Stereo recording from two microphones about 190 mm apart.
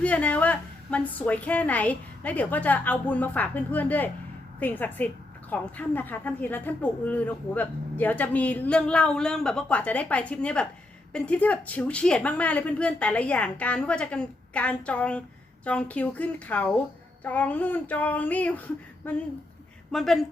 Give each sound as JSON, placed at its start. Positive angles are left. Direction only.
{"t": 0.0, "sound": "a woman's voice", "side_deg": 5}